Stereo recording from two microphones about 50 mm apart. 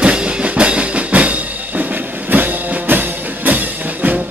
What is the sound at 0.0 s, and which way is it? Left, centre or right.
Music, centre.